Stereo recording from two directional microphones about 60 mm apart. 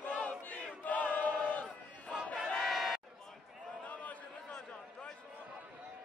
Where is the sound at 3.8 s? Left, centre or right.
Left.